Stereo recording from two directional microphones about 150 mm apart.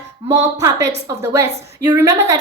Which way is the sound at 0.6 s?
20° right (ahead or behind).